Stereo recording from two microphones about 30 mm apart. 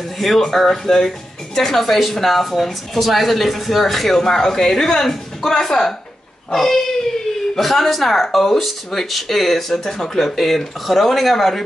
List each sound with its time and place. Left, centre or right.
0.2 s speech: centre
4.2 s speech: centre
7.5 s speech: centre